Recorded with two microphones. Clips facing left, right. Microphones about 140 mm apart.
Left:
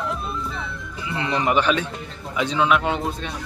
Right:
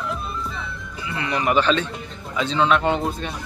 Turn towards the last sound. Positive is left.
turn(degrees=0)  # may be behind; listen again after turning